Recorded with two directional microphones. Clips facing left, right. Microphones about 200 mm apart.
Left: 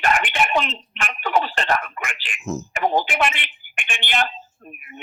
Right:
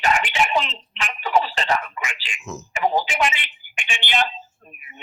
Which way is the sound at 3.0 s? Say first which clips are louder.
Left 1 dB; 55° left (ahead or behind).